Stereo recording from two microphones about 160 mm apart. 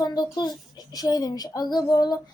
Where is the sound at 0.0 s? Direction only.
25° left (ahead or behind).